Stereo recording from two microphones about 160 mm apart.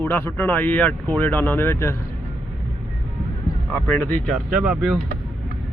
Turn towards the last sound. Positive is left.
turn(degrees=0)  # may be behind; listen again after turning